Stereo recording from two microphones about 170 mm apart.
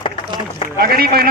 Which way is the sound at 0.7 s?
65° right (ahead or behind).